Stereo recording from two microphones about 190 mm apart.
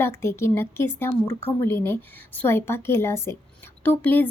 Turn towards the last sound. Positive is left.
turn(degrees=10)  # may be behind; listen again after turning